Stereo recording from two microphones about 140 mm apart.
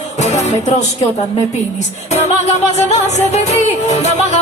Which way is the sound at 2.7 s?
55° left (ahead or behind).